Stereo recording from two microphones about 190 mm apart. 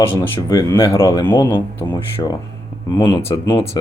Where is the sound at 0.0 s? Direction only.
15° left (ahead or behind).